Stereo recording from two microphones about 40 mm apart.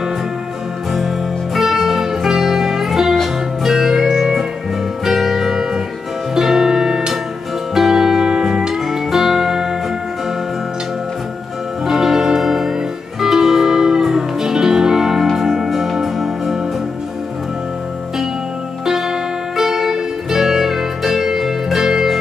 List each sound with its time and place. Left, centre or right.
0.9 s music: centre
11.8 s music: centre
18.9 s music: centre